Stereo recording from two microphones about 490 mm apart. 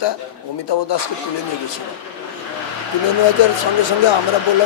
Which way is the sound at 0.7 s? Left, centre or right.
Left.